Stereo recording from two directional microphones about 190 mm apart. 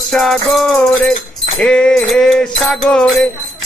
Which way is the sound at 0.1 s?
Centre (ahead or behind).